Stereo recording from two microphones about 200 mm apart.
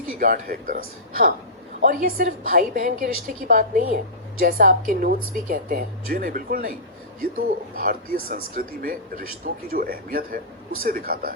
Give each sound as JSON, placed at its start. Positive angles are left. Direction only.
{"t": 0.2, "sound": "speech", "side_deg": -45}